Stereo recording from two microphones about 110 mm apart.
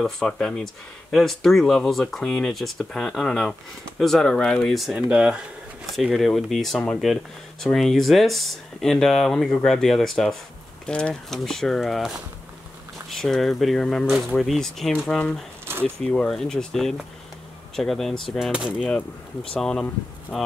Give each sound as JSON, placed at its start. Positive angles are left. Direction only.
{"t": 0.0, "sound": "speech", "side_deg": 5}
{"t": 13.1, "sound": "speech", "side_deg": 0}
{"t": 15.6, "sound": "a sound", "side_deg": -20}
{"t": 16.1, "sound": "speech", "side_deg": 5}
{"t": 18.5, "sound": "speech", "side_deg": -10}
{"t": 18.8, "sound": "speech", "side_deg": 10}